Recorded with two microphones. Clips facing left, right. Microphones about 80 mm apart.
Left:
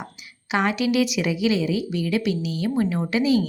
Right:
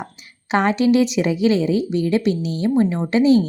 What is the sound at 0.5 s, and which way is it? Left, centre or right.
A woman's voice, right.